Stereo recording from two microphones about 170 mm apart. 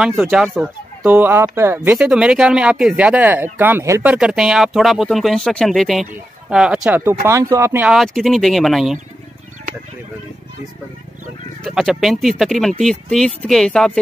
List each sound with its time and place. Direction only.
0.0 s speech: centre (ahead or behind)
7.2 s speech: 15° right (ahead or behind)
7.9 s speech: centre (ahead or behind)
11.6 s speech: centre (ahead or behind)